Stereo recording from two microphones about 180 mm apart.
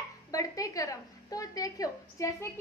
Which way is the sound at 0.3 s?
20° left (ahead or behind).